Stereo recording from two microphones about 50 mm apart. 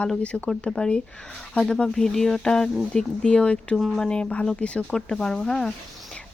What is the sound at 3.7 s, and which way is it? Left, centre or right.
Speech, centre.